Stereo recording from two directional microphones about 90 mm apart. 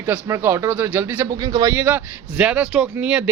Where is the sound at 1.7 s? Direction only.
25° right (ahead or behind).